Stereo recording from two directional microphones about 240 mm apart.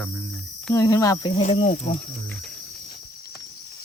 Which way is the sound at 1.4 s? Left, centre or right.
Left.